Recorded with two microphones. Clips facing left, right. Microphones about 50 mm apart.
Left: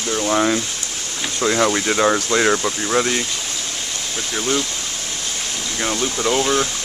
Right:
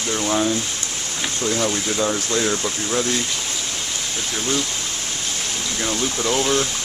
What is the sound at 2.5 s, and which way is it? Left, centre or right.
Speech, left.